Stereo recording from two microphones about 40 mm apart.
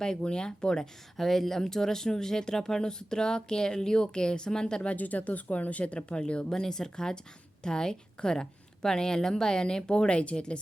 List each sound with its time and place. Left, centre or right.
0.0 s speech: left
4.9 s speech: left
6.5 s a woman's voice: centre